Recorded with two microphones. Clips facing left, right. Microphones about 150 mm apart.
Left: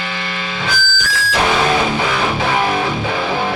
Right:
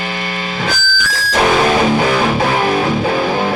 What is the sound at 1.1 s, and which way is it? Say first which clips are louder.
Music: right 3 dB; 40° right (ahead or behind).